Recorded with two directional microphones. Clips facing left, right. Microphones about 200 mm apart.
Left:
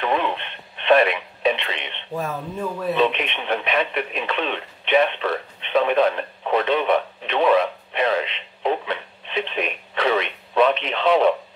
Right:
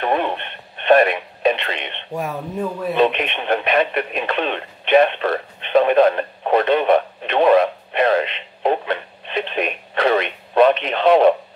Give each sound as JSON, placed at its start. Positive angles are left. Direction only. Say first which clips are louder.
{"t": 0.0, "sound": "radio", "louder": "right 2 dB", "side_deg": -50}
{"t": 3.0, "sound": "radio", "louder": "right 5 dB", "side_deg": -50}